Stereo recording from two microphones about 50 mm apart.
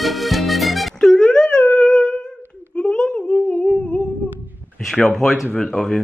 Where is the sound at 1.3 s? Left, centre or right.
Centre.